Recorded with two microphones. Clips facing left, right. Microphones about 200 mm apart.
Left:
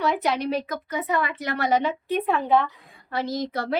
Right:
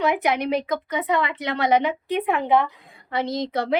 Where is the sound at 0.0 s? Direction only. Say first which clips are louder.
Right 2 dB; 15° right (ahead or behind).